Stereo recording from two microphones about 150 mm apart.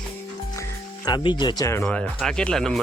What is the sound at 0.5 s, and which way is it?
Music, 25° left (ahead or behind).